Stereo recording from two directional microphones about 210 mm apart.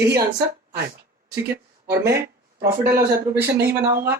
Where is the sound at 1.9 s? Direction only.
10° right (ahead or behind).